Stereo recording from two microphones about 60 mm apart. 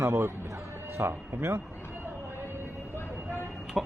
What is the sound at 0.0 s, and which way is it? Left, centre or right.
Speech, right.